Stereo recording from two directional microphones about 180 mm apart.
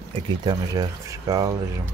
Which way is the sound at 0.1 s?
25° right (ahead or behind).